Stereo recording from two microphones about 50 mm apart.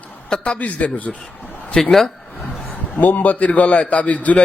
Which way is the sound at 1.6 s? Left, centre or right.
Left.